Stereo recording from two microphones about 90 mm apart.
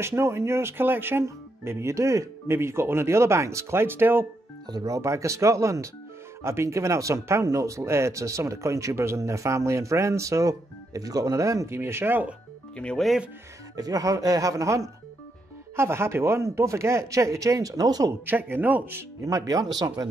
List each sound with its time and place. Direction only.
0.0 s speech: 30° right (ahead or behind)
4.6 s speech: 45° right (ahead or behind); by 12.4 s 20° right (ahead or behind)
12.7 s speech: 10° left (ahead or behind)
13.7 s speech: 45° right (ahead or behind)
18.2 s speech: 20° right (ahead or behind)
19.2 s speech: 40° right (ahead or behind)